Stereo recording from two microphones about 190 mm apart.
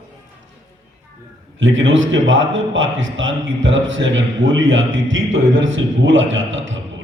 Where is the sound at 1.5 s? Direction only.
85° right.